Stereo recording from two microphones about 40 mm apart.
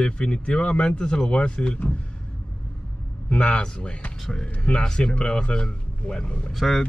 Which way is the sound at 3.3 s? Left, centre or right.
Left.